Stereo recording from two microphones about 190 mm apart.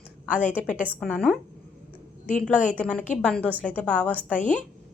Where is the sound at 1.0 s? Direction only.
5° left (ahead or behind).